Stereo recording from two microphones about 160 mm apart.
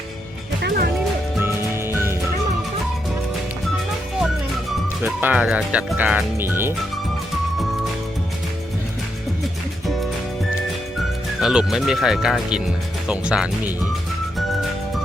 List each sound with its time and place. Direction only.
0.6 s music: 80° right
1.4 s music: 15° right (ahead or behind)
5.0 s speech: 10° right (ahead or behind)
11.3 s speech: 5° right (ahead or behind)
14.3 s music: centre (ahead or behind)